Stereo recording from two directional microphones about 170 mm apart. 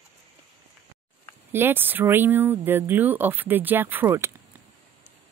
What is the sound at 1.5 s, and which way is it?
Speech, 10° right (ahead or behind).